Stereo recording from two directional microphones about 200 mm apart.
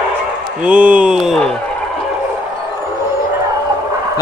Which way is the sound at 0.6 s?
5° right (ahead or behind).